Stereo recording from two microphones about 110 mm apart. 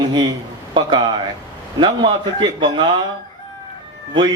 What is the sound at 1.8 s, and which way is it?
Speech, 45° right (ahead or behind).